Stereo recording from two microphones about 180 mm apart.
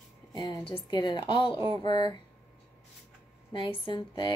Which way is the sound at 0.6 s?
25° left (ahead or behind).